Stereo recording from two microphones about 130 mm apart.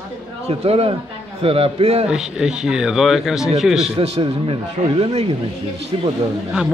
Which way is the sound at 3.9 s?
55° right (ahead or behind).